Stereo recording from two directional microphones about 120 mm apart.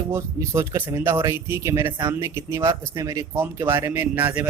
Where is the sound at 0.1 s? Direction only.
25° right (ahead or behind).